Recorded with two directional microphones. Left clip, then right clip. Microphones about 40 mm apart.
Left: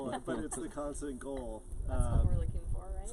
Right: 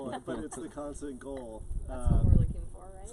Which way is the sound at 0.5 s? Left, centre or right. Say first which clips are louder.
Even; centre.